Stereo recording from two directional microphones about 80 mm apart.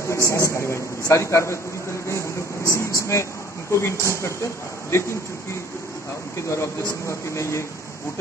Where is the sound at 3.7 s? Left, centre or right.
Left.